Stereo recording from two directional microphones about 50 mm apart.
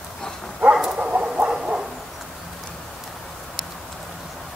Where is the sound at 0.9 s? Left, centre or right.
Right.